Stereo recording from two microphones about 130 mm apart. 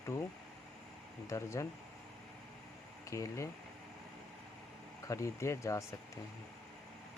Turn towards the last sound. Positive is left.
turn(degrees=20)  # may be behind; listen again after turning